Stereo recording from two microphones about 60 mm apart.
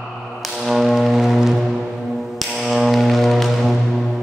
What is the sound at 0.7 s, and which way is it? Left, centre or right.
Music, centre.